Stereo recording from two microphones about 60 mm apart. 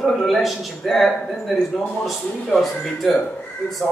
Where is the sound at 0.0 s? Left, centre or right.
Centre.